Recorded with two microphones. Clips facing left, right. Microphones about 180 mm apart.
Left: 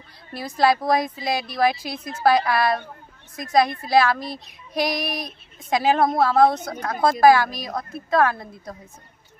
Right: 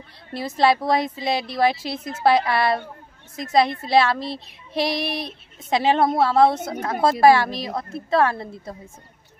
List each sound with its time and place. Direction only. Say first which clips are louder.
0.3 s speech: right 1 dB; 25° right (ahead or behind)